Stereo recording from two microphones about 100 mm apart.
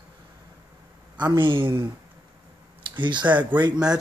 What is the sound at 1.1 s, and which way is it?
Speech, 50° right (ahead or behind).